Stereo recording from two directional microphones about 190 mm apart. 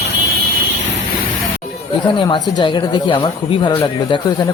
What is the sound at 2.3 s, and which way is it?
A man's voice, 20° left (ahead or behind).